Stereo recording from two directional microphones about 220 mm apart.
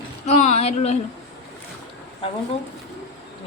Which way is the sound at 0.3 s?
30° left (ahead or behind).